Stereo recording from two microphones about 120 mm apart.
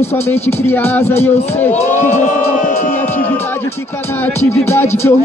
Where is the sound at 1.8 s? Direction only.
85° left.